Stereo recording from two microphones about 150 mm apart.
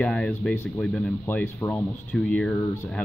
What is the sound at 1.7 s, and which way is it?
Speech, 5° left (ahead or behind).